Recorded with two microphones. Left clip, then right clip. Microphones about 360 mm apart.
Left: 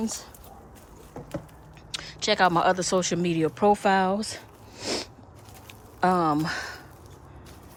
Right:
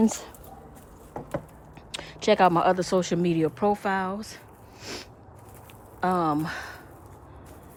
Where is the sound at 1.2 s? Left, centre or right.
Right.